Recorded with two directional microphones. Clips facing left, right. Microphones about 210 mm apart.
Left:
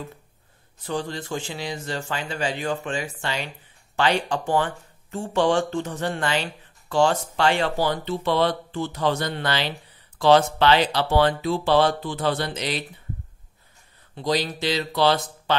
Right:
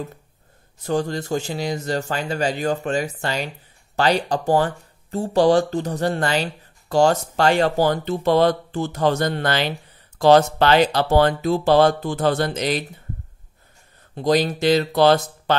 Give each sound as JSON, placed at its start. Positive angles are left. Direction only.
{"t": 0.8, "sound": "speech", "side_deg": -45}
{"t": 14.1, "sound": "speech", "side_deg": -50}